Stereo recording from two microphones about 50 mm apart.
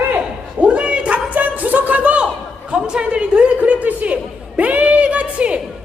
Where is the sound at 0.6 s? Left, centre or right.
Right.